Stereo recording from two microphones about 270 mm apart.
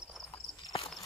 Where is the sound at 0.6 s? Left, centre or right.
Left.